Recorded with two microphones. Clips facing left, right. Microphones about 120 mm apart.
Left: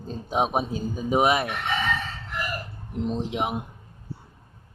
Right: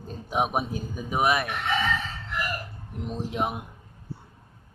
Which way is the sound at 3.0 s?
25° left (ahead or behind).